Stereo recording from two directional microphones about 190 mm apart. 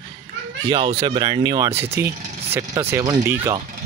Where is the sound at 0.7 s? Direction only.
25° right (ahead or behind).